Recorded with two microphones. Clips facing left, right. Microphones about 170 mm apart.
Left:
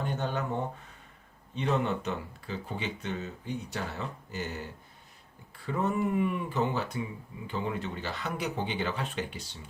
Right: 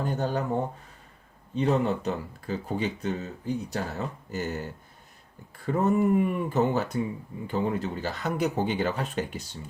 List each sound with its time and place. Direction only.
0.0 s speech: 40° right (ahead or behind)
1.5 s speech: 35° right (ahead or behind)